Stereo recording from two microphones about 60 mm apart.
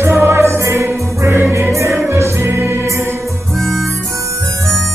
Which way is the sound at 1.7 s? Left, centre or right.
Right.